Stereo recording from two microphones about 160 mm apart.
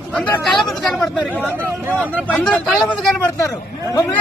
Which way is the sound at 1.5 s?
15° right (ahead or behind).